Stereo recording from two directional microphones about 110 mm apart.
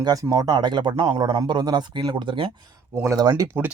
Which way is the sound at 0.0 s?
35° right (ahead or behind).